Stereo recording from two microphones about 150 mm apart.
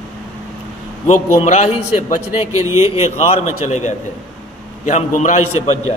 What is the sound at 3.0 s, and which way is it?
A man's voice, 50° left (ahead or behind).